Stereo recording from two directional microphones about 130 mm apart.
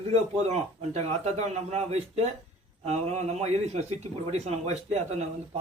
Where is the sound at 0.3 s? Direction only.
55° right (ahead or behind).